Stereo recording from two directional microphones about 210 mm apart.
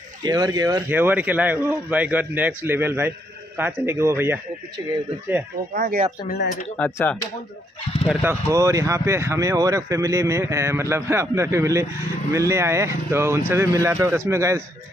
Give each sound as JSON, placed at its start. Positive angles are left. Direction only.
{"t": 0.2, "sound": "speech", "side_deg": -15}
{"t": 5.8, "sound": "speech", "side_deg": -45}
{"t": 6.2, "sound": "speech", "side_deg": 45}
{"t": 6.8, "sound": "speech", "side_deg": 10}
{"t": 8.0, "sound": "speech", "side_deg": -5}